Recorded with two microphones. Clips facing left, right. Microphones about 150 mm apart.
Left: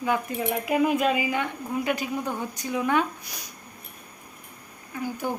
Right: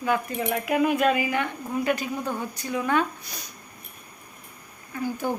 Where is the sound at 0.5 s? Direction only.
Centre (ahead or behind).